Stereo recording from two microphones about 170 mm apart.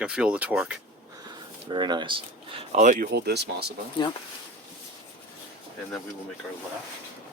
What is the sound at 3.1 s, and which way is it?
Speech, 75° right (ahead or behind).